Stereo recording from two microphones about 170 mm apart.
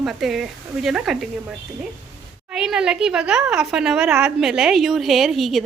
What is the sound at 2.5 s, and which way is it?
A woman's voice, 5° right (ahead or behind).